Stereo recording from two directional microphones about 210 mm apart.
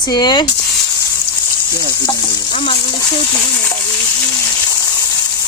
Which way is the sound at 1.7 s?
20° left (ahead or behind).